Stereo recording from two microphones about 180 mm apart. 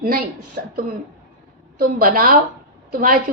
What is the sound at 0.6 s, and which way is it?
Throat clearing, 55° right (ahead or behind).